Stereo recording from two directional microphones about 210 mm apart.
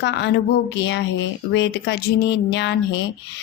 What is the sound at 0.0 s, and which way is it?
A woman's voice, 55° left (ahead or behind).